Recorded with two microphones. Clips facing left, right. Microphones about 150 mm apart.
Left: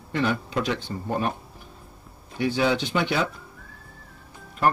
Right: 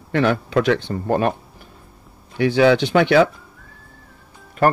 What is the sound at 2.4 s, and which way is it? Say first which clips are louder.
Speech: right 8 dB; 80° right.